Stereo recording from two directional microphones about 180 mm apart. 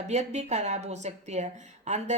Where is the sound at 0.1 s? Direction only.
40° right (ahead or behind).